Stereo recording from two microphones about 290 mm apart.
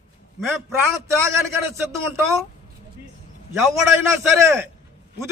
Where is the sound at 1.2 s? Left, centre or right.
Centre.